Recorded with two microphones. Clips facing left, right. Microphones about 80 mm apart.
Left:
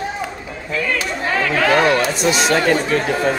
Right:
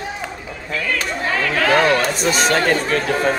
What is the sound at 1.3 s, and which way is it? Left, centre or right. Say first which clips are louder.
Chatter: left 2 dB; left.